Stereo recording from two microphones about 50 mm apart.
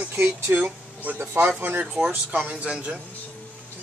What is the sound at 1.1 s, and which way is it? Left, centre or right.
Speech, right.